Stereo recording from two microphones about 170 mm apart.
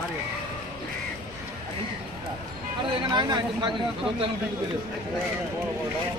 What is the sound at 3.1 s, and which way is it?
Speech, 25° right (ahead or behind).